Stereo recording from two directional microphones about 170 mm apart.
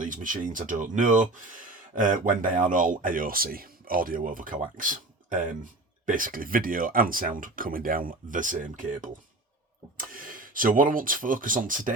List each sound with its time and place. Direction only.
0.0 s speech: 50° right (ahead or behind)